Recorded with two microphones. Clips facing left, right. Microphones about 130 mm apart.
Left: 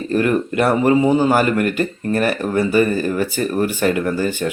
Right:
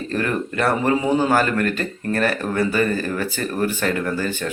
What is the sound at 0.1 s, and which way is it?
Speech, 15° left (ahead or behind).